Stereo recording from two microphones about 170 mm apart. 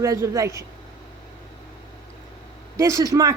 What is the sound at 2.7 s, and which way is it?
Speech, 15° right (ahead or behind).